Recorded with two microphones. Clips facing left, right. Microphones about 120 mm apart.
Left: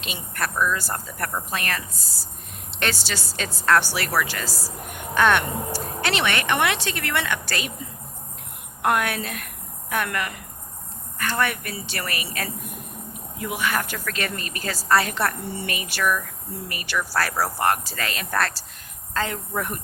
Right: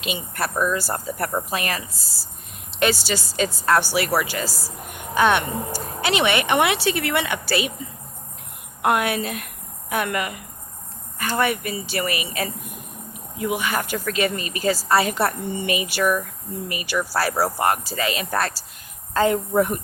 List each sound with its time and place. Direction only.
0.0 s speech: 5° right (ahead or behind)
0.8 s speech: 5° right (ahead or behind)
1.2 s speech: 25° right (ahead or behind)
1.5 s speech: 5° right (ahead or behind)
8.8 s speech: 5° right (ahead or behind)
19.1 s speech: 15° right (ahead or behind)